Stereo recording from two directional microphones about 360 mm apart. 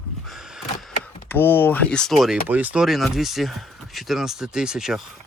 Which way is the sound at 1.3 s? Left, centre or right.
Centre.